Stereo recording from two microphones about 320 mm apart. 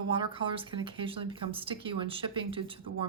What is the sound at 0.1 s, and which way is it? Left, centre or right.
Speech, centre.